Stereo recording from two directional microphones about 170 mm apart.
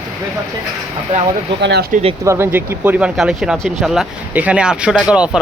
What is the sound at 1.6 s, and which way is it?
Speech, 85° right.